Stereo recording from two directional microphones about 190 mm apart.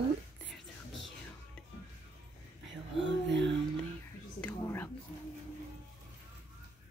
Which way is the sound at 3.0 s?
70° right (ahead or behind).